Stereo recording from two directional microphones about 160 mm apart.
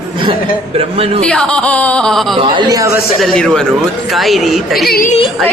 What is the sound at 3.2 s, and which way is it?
Speech, 5° left (ahead or behind).